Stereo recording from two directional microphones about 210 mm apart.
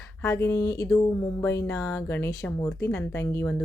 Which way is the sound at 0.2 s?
10° left (ahead or behind).